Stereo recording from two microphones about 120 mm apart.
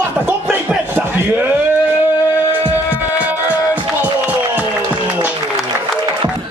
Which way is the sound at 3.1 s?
10° right (ahead or behind).